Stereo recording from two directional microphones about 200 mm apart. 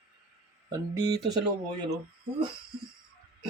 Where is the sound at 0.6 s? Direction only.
20° right (ahead or behind).